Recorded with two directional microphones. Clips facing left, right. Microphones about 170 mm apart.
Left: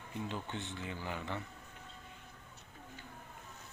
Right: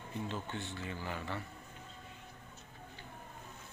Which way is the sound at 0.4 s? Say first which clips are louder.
Even; 20° left (ahead or behind).